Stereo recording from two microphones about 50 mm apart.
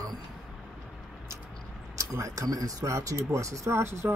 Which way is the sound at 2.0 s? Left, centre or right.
Right.